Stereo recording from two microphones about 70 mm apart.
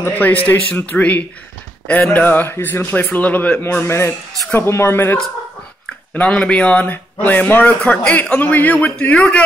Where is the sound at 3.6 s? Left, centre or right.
Left.